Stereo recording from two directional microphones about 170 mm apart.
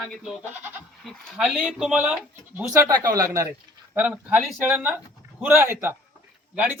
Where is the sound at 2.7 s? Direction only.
20° right (ahead or behind).